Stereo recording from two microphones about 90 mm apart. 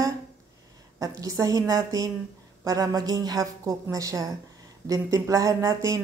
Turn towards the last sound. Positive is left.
turn(degrees=-35)  # may be behind; listen again after turning